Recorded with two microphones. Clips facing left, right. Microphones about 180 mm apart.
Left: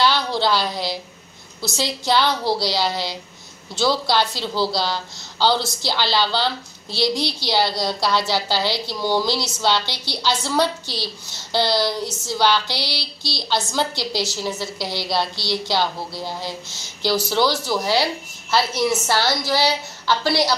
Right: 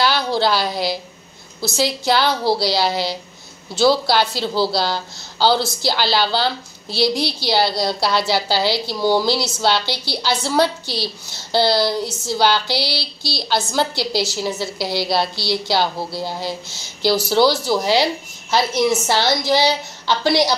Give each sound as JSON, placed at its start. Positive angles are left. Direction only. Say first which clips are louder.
{"t": 0.0, "sound": "a woman's voice", "louder": "right 2 dB", "side_deg": -5}